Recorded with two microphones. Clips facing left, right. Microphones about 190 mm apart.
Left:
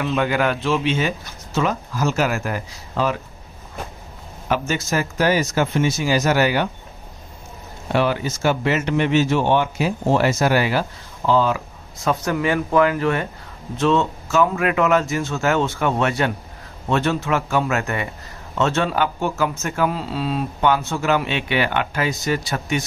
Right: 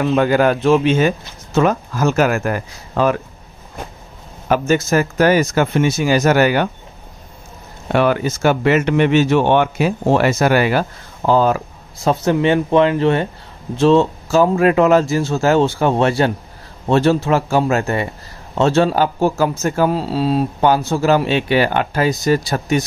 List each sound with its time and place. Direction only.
0.0 s speech: 45° right (ahead or behind)
4.5 s speech: 50° right (ahead or behind)
7.9 s speech: 55° right (ahead or behind)
12.0 s a man's voice: 30° right (ahead or behind)